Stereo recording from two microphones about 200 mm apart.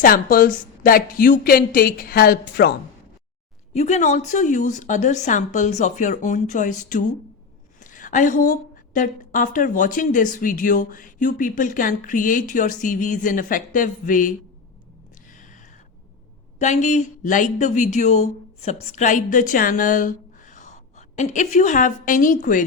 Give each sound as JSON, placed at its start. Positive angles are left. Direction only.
{"t": 0.0, "sound": "a woman's voice", "side_deg": 45}
{"t": 3.8, "sound": "a woman's voice", "side_deg": 35}
{"t": 15.3, "sound": "a sound", "side_deg": 40}
{"t": 16.6, "sound": "speech", "side_deg": 35}